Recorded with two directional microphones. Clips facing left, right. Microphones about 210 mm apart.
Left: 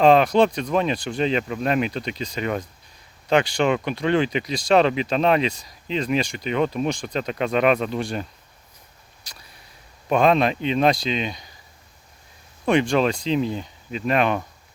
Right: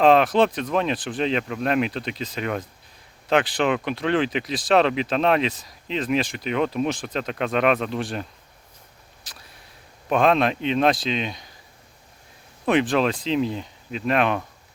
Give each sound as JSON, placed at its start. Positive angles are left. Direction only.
{"t": 0.0, "sound": "speech", "side_deg": 0}
{"t": 9.2, "sound": "a sound", "side_deg": 0}
{"t": 10.1, "sound": "speech", "side_deg": 0}
{"t": 12.6, "sound": "speech", "side_deg": -5}